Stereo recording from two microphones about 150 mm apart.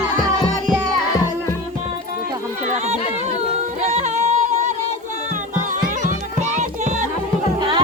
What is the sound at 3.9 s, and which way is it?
Music, 50° right (ahead or behind).